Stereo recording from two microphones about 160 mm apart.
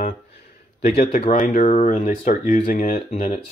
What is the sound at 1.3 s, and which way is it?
Speech, 55° left (ahead or behind).